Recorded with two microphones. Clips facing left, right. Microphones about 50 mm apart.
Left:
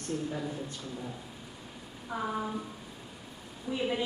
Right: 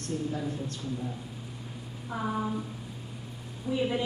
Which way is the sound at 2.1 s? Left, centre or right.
Centre.